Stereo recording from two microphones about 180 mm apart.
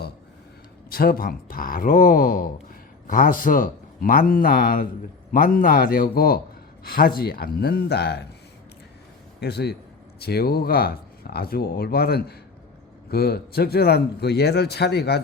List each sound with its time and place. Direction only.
0.9 s speech: 55° left (ahead or behind)
9.4 s speech: 65° left (ahead or behind)